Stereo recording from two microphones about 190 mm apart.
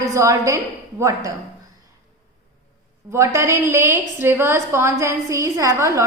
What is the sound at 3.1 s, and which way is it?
A woman's voice, 15° right (ahead or behind).